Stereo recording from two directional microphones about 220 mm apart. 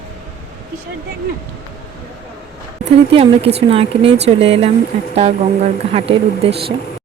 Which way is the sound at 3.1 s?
25° right (ahead or behind).